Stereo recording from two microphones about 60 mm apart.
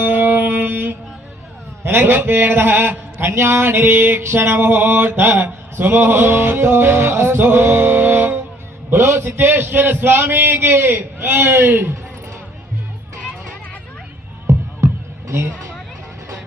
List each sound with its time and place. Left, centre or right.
0.0 s music: right
1.8 s speech: right
15.3 s a sound: right